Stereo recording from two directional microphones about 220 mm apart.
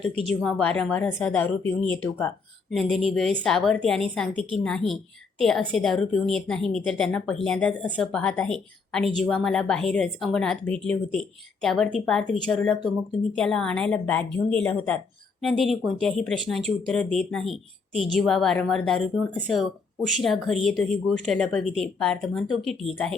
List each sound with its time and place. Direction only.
0.3 s a woman's voice: centre (ahead or behind)
20.2 s a woman's voice: centre (ahead or behind)